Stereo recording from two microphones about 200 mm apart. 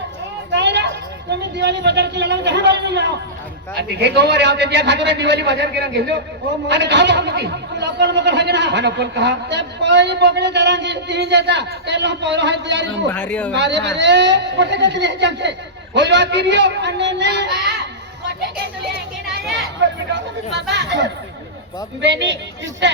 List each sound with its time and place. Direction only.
0.5 s a man's voice: 60° right (ahead or behind)
13.1 s speech: 10° left (ahead or behind)
13.5 s a man's voice: 60° right (ahead or behind)
20.1 s a man's voice: 60° right (ahead or behind)